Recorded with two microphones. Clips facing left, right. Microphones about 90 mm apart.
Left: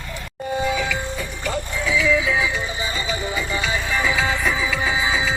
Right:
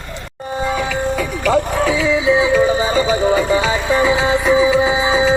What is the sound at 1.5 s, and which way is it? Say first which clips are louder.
Music: right 11 dB; 70° right (ahead or behind).